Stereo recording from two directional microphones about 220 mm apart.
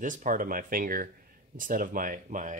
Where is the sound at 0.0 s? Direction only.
35° right (ahead or behind).